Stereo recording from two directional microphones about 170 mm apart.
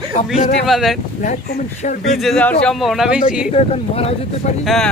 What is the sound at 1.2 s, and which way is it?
Speech, 50° left (ahead or behind).